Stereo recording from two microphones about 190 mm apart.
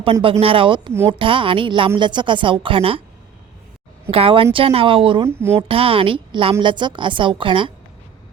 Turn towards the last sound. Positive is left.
turn(degrees=-25)  # may be behind; listen again after turning